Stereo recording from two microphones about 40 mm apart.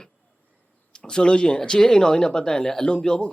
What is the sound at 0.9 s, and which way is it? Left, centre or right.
Speech, left.